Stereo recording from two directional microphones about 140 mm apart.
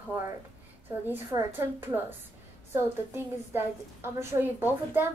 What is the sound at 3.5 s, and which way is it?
A woman's voice, 20° right (ahead or behind).